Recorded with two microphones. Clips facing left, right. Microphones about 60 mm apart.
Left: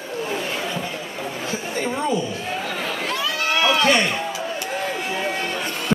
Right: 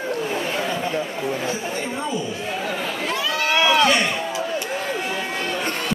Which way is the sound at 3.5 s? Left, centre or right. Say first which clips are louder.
Right 2 dB; right.